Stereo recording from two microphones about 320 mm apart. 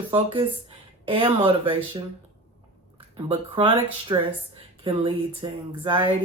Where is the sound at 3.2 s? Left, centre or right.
Centre.